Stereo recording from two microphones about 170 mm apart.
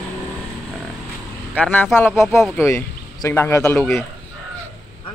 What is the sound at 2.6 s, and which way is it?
Speech, 15° left (ahead or behind).